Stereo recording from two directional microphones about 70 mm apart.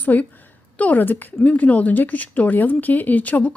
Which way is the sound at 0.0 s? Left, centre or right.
Left.